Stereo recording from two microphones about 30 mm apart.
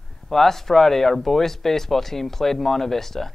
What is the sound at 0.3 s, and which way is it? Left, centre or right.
Speech, centre.